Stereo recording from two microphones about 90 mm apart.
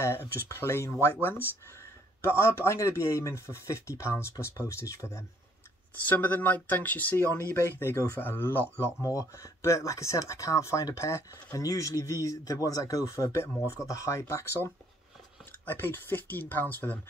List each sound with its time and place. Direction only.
0.0 s speech: 30° left (ahead or behind)
2.2 s speech: 30° left (ahead or behind)
6.0 s speech: 20° left (ahead or behind)
7.2 s speech: 30° left (ahead or behind)
9.0 s speech: 35° left (ahead or behind); by 17.0 s 20° left (ahead or behind)